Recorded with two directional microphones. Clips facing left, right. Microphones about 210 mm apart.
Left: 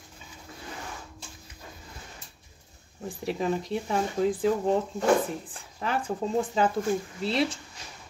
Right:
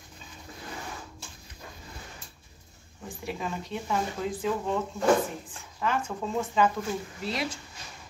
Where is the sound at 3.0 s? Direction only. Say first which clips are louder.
Left 6 dB; 35° left (ahead or behind).